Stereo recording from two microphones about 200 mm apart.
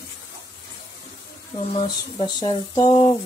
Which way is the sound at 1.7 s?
25° left (ahead or behind).